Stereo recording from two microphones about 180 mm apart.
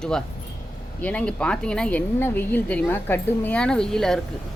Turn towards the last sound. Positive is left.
turn(degrees=5)  # may be behind; listen again after turning